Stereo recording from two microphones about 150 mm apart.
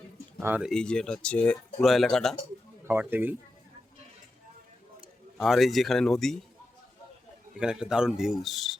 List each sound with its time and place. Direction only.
0.3 s speech: 15° right (ahead or behind)
0.6 s speech: 5° left (ahead or behind)
2.8 s speech: 15° right (ahead or behind)
5.4 s speech: centre (ahead or behind)
7.6 s speech: 5° right (ahead or behind)